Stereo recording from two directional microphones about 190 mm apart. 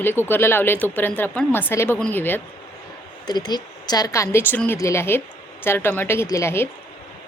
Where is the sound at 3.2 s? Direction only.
20° left (ahead or behind).